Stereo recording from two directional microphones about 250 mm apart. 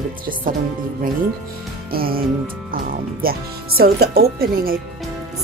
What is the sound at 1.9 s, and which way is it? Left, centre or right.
Speech, right.